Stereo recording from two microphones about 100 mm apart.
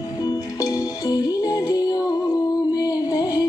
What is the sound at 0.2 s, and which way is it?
Music, 40° left (ahead or behind).